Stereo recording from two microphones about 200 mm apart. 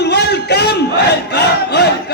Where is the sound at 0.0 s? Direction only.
55° left (ahead or behind).